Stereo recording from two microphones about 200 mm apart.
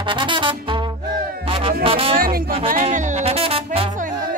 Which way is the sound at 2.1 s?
45° right (ahead or behind).